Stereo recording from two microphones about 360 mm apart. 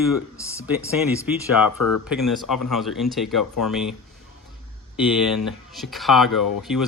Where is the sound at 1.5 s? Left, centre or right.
Left.